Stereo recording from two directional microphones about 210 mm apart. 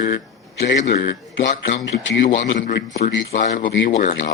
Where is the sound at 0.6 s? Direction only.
55° left (ahead or behind).